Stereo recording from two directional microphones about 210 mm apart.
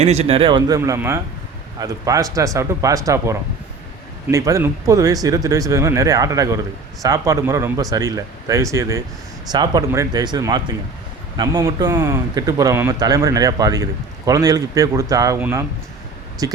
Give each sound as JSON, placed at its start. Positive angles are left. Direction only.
{"t": 0.0, "sound": "speech", "side_deg": -30}